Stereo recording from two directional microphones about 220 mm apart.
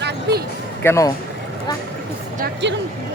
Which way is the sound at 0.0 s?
50° right (ahead or behind).